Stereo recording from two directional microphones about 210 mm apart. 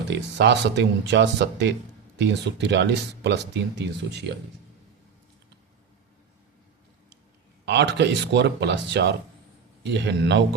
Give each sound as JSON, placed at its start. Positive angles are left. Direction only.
{"t": 0.1, "sound": "speech", "side_deg": -55}
{"t": 7.6, "sound": "speech", "side_deg": -55}